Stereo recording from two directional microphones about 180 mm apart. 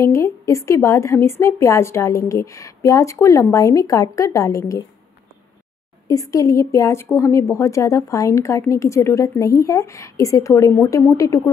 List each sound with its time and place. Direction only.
0.0 s a woman's voice: 15° left (ahead or behind)
6.0 s a woman's voice: 20° left (ahead or behind)